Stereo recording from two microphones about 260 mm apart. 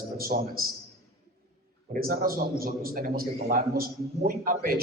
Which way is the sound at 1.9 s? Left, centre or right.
Right.